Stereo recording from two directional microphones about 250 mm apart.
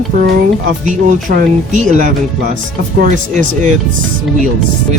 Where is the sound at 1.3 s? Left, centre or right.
Right.